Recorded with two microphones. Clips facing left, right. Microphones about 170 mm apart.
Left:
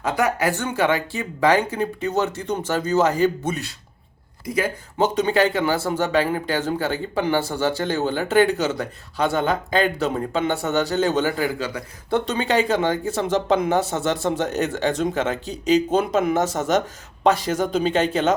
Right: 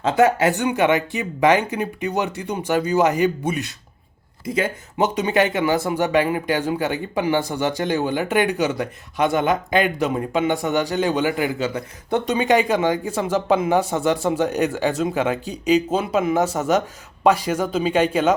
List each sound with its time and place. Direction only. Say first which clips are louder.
0.0 s speech: right 5 dB; 25° right (ahead or behind); by 18.3 s 10° right (ahead or behind)